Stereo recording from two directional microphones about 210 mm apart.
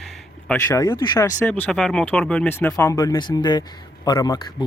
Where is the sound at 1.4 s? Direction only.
10° left (ahead or behind).